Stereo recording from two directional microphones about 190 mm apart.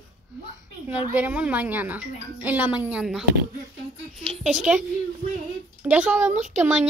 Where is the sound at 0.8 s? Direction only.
10° right (ahead or behind).